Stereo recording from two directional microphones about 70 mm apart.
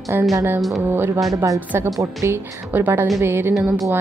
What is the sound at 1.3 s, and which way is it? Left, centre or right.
A woman's voice, right.